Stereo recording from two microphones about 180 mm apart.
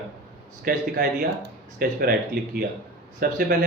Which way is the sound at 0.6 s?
55° right (ahead or behind).